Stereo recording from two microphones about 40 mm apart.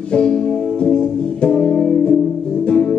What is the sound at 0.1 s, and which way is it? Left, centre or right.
Music, left.